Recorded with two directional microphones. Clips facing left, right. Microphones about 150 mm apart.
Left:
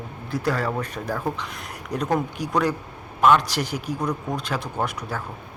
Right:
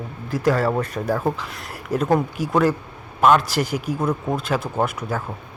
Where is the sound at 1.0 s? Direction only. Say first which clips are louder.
Right 5 dB; 10° right (ahead or behind).